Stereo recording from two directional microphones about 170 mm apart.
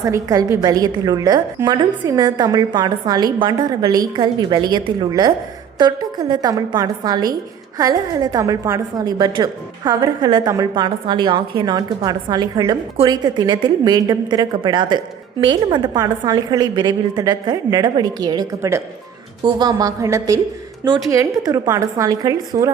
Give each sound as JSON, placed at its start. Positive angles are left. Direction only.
{"t": 0.0, "sound": "a woman's voice", "side_deg": -20}